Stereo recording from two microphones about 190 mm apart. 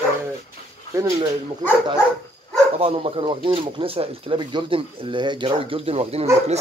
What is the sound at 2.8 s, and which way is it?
Speech, 30° right (ahead or behind).